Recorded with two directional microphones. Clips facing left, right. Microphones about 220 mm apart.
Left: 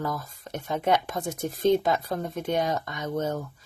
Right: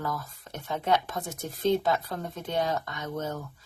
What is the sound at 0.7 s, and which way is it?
Speech, 15° left (ahead or behind).